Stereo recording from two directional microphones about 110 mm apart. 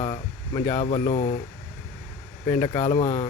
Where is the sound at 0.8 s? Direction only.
90° left.